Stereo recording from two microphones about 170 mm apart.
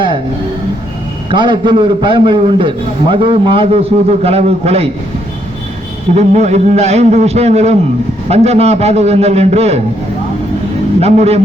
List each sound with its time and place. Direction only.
1.3 s a man's voice: 30° right (ahead or behind)
6.1 s a man's voice: 40° right (ahead or behind)
11.0 s a man's voice: 35° right (ahead or behind)